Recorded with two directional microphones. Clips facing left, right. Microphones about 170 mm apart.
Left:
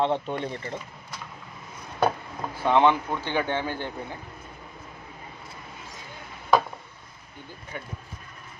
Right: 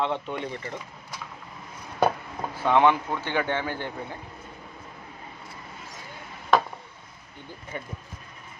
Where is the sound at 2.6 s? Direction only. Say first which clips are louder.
Even; 20° left (ahead or behind).